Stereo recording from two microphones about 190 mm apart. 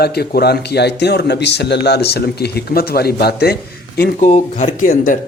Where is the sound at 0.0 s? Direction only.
55° left (ahead or behind).